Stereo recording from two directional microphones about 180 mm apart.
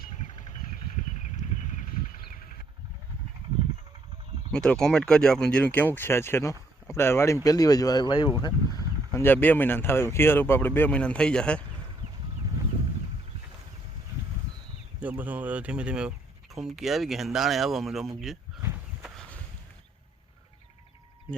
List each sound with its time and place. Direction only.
0.0 s a sound: 40° left (ahead or behind)
4.5 s speech: 5° left (ahead or behind)
15.0 s speech: 10° right (ahead or behind)
18.6 s walk: 15° right (ahead or behind)